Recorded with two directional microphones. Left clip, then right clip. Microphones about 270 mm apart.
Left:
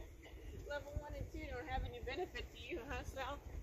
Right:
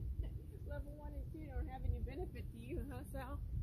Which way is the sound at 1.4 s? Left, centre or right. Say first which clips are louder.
Left 8 dB; right.